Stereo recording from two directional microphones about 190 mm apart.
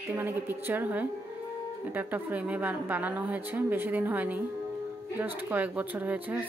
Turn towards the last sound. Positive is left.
turn(degrees=-10)  # may be behind; listen again after turning